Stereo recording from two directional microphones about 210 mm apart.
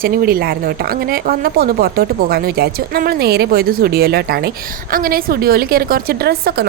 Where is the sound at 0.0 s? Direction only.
45° right (ahead or behind).